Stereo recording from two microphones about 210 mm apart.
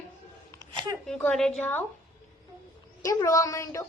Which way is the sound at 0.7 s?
20° right (ahead or behind).